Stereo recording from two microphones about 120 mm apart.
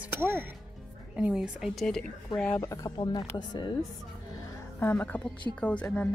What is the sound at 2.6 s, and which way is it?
Speech, 30° left (ahead or behind).